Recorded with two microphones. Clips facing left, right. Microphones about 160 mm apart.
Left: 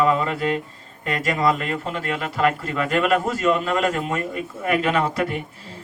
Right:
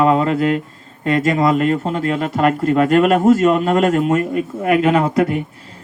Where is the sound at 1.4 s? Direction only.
45° right (ahead or behind).